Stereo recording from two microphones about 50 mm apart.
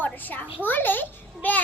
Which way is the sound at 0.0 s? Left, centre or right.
Left.